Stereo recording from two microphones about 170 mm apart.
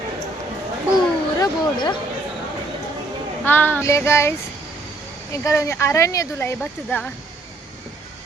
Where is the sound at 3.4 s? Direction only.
10° left (ahead or behind).